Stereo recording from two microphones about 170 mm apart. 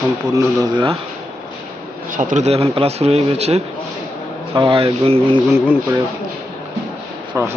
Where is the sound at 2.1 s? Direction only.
45° right (ahead or behind).